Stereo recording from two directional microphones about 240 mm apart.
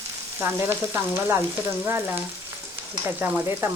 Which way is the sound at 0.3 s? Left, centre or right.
Centre.